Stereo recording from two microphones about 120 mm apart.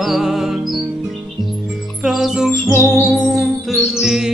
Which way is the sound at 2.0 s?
5° right (ahead or behind).